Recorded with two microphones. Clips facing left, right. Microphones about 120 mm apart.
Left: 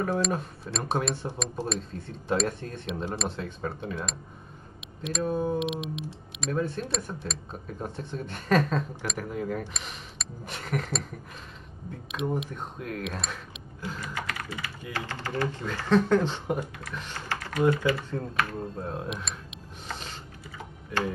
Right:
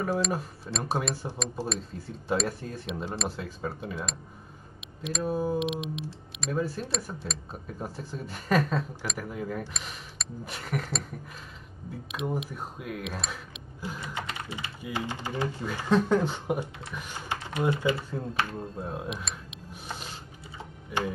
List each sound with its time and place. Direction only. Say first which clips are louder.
0.0 s speech: left 1 dB; 5° right (ahead or behind)
13.7 s typing: left 1 dB; 10° right (ahead or behind)
14.0 s typing: left 1 dB; 25° right (ahead or behind)
14.8 s speech: right 3 dB; 15° right (ahead or behind)
18.6 s speech: left 1 dB; 5° right (ahead or behind)
19.9 s a sound: left 1 dB; 10° right (ahead or behind)